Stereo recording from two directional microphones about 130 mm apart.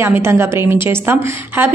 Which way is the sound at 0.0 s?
20° right (ahead or behind).